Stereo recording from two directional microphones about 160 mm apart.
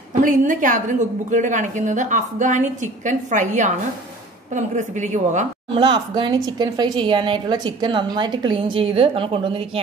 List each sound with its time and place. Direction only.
0.1 s a woman's voice: 55° right (ahead or behind)
5.8 s speech: 30° right (ahead or behind)